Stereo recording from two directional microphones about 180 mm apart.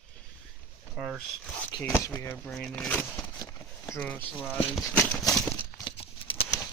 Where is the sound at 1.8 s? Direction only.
15° left (ahead or behind).